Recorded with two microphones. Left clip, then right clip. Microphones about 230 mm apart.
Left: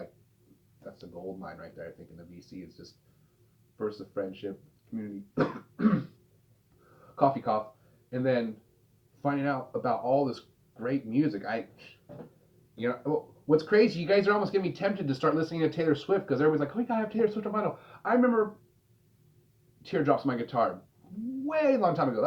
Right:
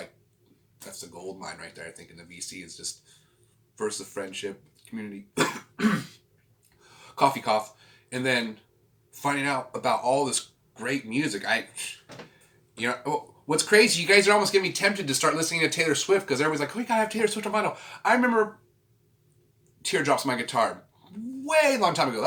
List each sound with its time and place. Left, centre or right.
1.4 s speech: right
3.8 s speech: right
7.2 s speech: right
19.8 s speech: right